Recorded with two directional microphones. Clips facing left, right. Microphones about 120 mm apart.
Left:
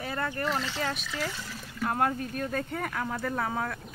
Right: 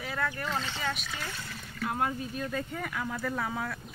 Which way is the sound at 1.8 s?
55° left (ahead or behind).